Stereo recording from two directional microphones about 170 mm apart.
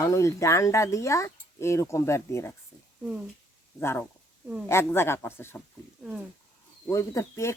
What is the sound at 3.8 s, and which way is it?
Speech, 15° left (ahead or behind).